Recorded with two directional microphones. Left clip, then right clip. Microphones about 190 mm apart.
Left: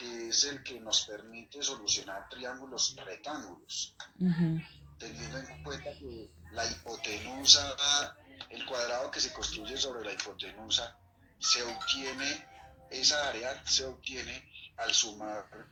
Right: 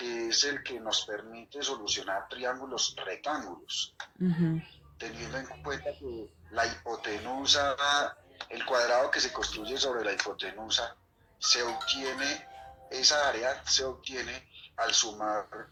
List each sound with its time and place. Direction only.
0.0 s a sound: 35° right (ahead or behind)
0.3 s speech: 30° right (ahead or behind)
4.9 s speech: 30° right (ahead or behind)
6.0 s speech: 50° right (ahead or behind)
6.5 s speech: 30° right (ahead or behind)